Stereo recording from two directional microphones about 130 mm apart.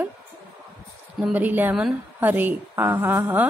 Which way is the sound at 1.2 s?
10° right (ahead or behind).